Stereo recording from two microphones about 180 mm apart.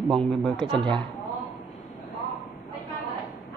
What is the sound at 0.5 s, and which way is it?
Speech, 25° right (ahead or behind).